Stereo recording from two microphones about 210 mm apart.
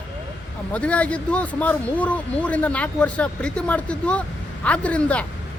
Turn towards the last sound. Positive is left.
turn(degrees=5)  # may be behind; listen again after turning